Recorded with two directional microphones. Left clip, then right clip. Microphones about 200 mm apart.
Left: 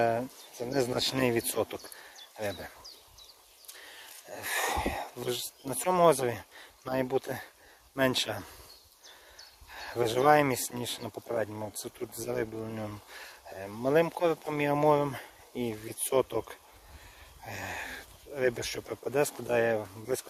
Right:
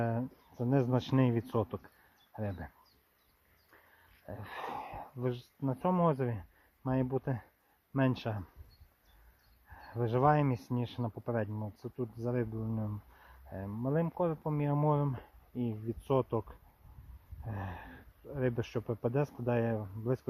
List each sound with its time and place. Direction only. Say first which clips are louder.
0.0 s speech: left 8 dB; 10° left (ahead or behind)
4.4 s a sound: left 10 dB; 10° left (ahead or behind)
5.7 s speech: left 8 dB; 15° left (ahead or behind)
9.7 s speech: left 5 dB; 10° left (ahead or behind)